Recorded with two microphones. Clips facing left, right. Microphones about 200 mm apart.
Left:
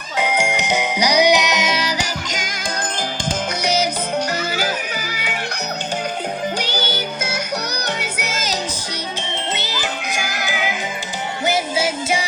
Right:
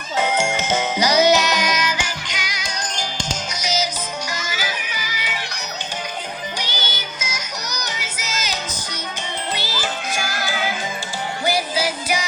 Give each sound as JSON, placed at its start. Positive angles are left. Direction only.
{"t": 0.2, "sound": "music", "side_deg": 15}
{"t": 6.6, "sound": "music", "side_deg": 60}
{"t": 9.1, "sound": "music", "side_deg": 25}